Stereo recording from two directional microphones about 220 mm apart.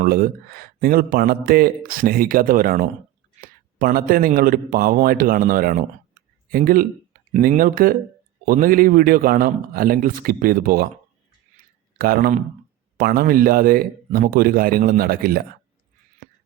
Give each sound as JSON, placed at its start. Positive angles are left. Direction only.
{"t": 0.0, "sound": "speech", "side_deg": -40}
{"t": 11.5, "sound": "a sound", "side_deg": -45}
{"t": 13.0, "sound": "speech", "side_deg": -40}